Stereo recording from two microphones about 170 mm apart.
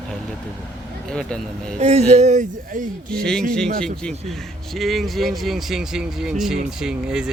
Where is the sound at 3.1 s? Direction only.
5° left (ahead or behind).